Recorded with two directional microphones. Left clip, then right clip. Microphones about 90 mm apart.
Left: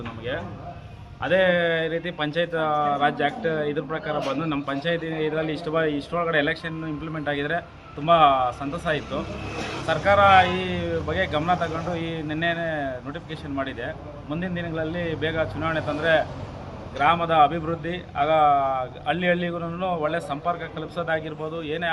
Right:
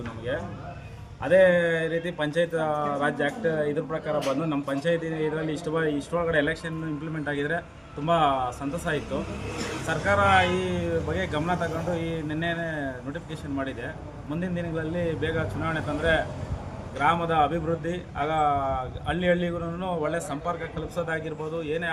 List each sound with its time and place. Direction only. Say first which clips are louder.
1.2 s a man's voice: right 1 dB; 40° right (ahead or behind)